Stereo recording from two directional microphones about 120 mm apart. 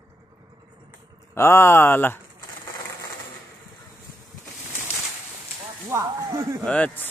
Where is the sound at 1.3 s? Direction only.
20° left (ahead or behind).